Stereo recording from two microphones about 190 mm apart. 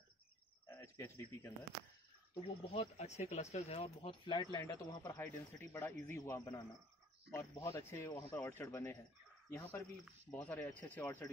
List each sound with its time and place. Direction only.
0.7 s speech: 15° left (ahead or behind)
2.4 s speech: 30° left (ahead or behind); by 11.2 s 10° left (ahead or behind)